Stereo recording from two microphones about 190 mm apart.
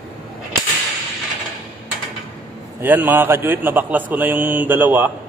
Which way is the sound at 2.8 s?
10° right (ahead or behind).